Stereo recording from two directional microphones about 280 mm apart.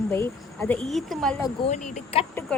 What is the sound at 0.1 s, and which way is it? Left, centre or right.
Speech, centre.